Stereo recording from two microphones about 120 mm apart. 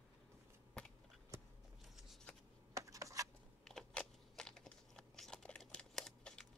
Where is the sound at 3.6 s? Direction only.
5° left (ahead or behind).